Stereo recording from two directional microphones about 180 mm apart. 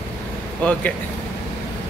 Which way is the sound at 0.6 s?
10° left (ahead or behind).